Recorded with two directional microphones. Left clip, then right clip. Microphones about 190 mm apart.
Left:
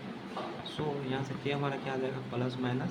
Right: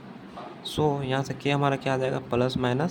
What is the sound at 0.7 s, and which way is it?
Speech, 60° right (ahead or behind).